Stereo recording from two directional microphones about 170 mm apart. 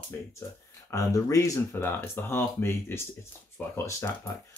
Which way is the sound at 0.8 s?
20° left (ahead or behind).